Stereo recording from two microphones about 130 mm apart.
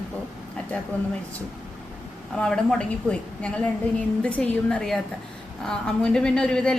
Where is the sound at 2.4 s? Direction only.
5° left (ahead or behind).